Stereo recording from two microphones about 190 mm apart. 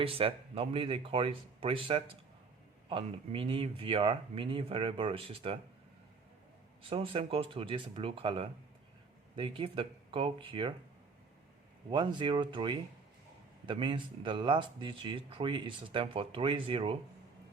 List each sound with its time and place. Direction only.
0.0 s speech: 30° right (ahead or behind)
6.9 s speech: 30° right (ahead or behind)
11.9 s speech: 25° right (ahead or behind)